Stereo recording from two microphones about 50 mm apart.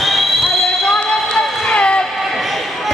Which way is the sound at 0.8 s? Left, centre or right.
Centre.